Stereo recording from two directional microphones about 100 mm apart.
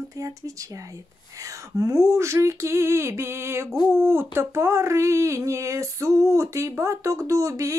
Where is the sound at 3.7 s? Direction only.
25° right (ahead or behind).